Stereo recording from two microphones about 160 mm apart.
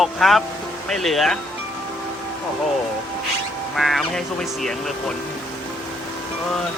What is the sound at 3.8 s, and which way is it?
Speech, centre (ahead or behind).